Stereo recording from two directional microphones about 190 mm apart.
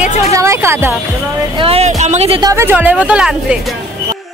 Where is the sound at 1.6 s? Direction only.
30° right (ahead or behind).